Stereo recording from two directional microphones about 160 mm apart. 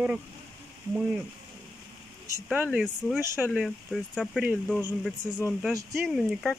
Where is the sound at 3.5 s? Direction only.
Centre (ahead or behind).